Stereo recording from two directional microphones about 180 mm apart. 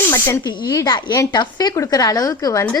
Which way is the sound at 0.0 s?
15° left (ahead or behind).